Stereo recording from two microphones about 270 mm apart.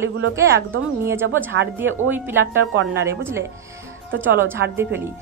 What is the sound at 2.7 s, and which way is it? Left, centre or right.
Speech, right.